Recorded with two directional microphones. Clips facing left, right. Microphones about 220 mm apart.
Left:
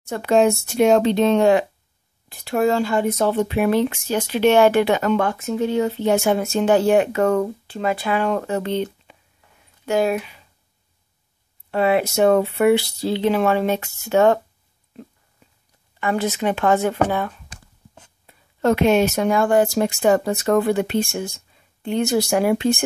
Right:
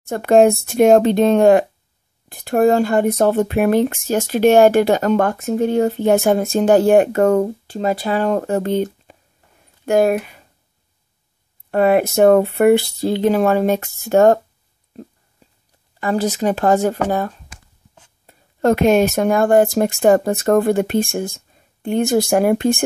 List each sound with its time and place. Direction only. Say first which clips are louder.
0.1 s speech: right 5 dB; 50° right (ahead or behind)
11.7 s speech: right 4 dB; 50° right (ahead or behind)
16.0 s speech: right 3 dB; 40° right (ahead or behind)